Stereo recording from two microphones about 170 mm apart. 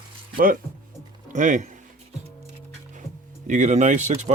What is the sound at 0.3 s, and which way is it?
Speech, 55° right (ahead or behind).